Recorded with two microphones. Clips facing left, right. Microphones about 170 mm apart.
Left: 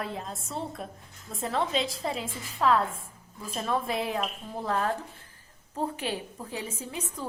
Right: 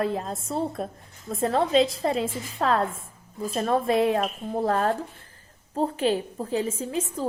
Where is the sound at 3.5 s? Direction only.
50° right (ahead or behind).